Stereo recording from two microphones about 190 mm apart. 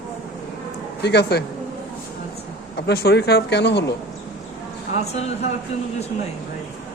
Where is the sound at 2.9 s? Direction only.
60° left (ahead or behind).